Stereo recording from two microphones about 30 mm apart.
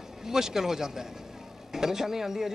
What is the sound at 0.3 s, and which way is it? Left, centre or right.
Speech, centre.